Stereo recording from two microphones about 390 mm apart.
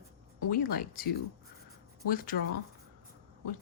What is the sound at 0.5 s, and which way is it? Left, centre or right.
Speech, left.